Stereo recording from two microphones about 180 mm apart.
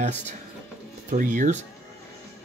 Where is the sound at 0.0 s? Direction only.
40° right (ahead or behind).